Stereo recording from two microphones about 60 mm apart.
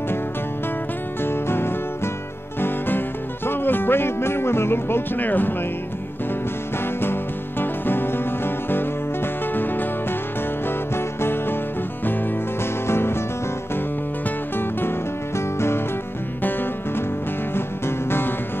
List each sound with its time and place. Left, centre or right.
1.2 s music: left
3.4 s music: left
7.0 s music: left
11.0 s music: left
12.8 s music: left
14.6 s music: left